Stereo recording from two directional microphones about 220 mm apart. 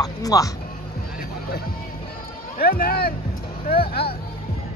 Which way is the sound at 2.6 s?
40° left (ahead or behind).